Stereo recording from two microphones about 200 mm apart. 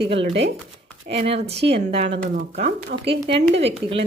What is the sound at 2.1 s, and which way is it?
Speech, 55° right (ahead or behind).